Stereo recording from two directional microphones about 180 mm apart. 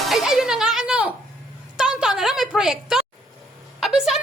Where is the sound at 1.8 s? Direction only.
5° right (ahead or behind).